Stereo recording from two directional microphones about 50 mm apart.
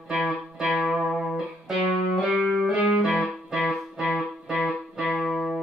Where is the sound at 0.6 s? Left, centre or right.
Centre.